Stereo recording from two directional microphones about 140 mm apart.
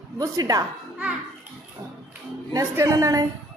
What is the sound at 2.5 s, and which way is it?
Speech, 25° right (ahead or behind).